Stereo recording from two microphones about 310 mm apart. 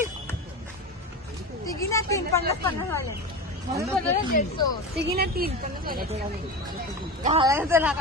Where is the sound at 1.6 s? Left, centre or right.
Centre.